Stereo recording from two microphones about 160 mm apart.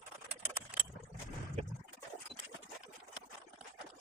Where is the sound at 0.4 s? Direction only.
10° right (ahead or behind).